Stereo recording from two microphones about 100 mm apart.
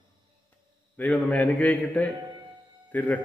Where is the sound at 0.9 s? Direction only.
15° left (ahead or behind).